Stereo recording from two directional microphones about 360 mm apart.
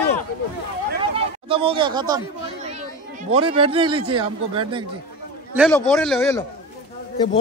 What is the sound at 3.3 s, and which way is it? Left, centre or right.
Speech, centre.